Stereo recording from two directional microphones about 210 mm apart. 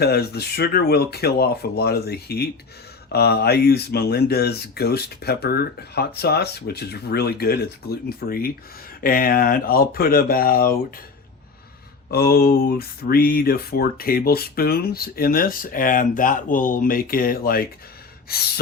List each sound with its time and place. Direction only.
0.0 s speech: 50° left (ahead or behind)
12.1 s speech: 45° left (ahead or behind)